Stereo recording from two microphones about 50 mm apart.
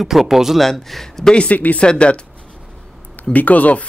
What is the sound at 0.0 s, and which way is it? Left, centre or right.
A man's voice, centre.